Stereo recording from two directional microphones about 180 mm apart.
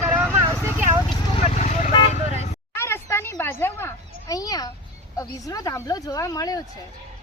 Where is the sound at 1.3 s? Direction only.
35° left (ahead or behind).